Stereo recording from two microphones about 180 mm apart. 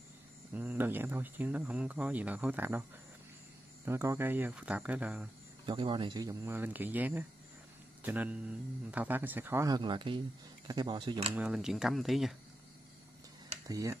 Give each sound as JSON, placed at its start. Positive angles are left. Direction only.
{"t": 0.5, "sound": "speech", "side_deg": -10}
{"t": 3.8, "sound": "speech", "side_deg": -15}
{"t": 5.7, "sound": "speech", "side_deg": -25}
{"t": 11.3, "sound": "speech", "side_deg": -5}
{"t": 13.7, "sound": "speech", "side_deg": -20}